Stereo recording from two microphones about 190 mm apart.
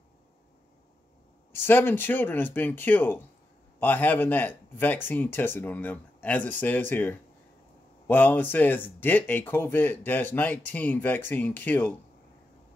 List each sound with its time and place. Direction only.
1.5 s speech: 10° left (ahead or behind)